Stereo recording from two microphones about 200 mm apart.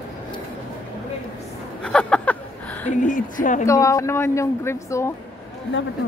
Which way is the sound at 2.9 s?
40° left (ahead or behind).